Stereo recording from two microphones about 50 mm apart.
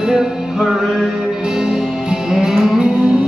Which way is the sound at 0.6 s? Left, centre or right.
Centre.